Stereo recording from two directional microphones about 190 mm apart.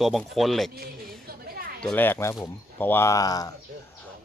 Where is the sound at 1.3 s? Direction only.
55° right (ahead or behind).